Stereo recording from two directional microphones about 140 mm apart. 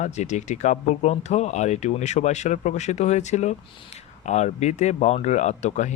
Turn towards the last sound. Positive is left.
turn(degrees=55)  # may be behind; listen again after turning